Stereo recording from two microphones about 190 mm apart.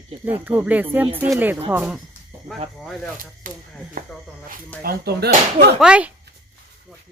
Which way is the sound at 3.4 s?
45° right (ahead or behind).